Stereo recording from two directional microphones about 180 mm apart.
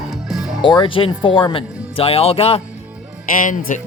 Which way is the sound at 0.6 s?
25° left (ahead or behind).